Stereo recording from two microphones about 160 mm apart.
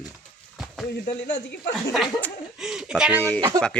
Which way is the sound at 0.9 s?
85° left.